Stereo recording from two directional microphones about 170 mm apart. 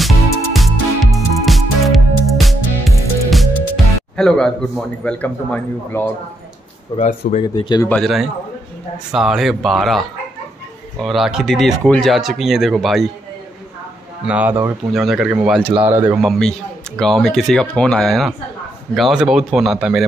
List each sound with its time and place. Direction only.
0.0 s music: centre (ahead or behind)
3.3 s speech: centre (ahead or behind)
7.0 s speech: 45° left (ahead or behind)
7.4 s speech: 25° left (ahead or behind)
7.9 s speech: centre (ahead or behind)
14.2 s speech: 10° right (ahead or behind)
16.2 s speech: centre (ahead or behind)